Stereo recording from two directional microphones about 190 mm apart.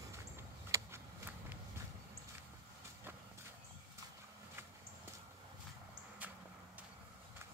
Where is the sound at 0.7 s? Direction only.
15° right (ahead or behind).